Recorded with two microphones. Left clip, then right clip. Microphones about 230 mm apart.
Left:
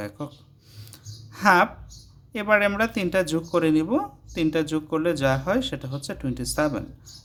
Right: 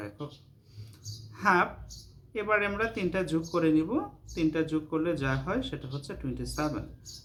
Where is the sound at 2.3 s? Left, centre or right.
Left.